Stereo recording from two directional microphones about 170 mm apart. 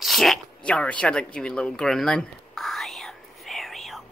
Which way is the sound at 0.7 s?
5° left (ahead or behind).